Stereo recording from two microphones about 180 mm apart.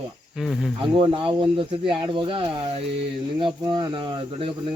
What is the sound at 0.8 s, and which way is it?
Speech, 30° right (ahead or behind).